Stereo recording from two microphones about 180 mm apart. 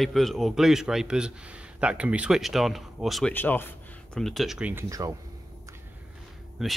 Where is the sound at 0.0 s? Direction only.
Centre (ahead or behind).